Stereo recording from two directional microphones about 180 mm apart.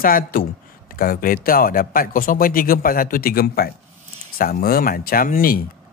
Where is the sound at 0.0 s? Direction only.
55° left (ahead or behind).